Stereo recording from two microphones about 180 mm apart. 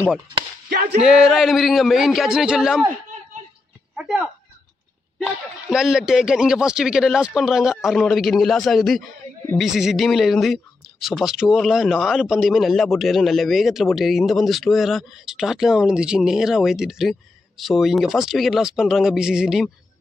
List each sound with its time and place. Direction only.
0.7 s a sound: 60° right (ahead or behind)
1.0 s a man's voice: 5° right (ahead or behind)
3.9 s a man's voice: 5° right (ahead or behind)